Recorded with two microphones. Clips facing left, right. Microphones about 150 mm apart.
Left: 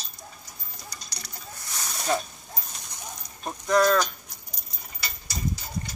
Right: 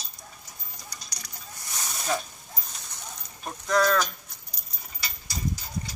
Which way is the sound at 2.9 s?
15° left (ahead or behind).